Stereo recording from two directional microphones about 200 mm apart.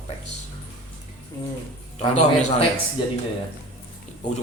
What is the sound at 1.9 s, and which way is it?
Speech, 35° left (ahead or behind).